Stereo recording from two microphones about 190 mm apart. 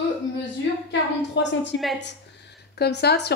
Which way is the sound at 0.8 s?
70° left (ahead or behind).